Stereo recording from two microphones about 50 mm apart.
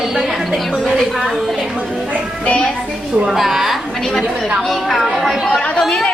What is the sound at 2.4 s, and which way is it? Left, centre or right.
Speech, centre.